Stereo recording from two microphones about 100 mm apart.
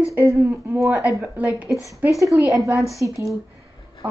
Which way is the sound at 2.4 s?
30° right (ahead or behind).